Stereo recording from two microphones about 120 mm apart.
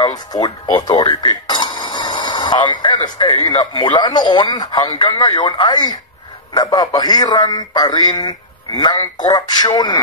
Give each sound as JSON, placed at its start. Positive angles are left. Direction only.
{"t": 0.0, "sound": "speech", "side_deg": 35}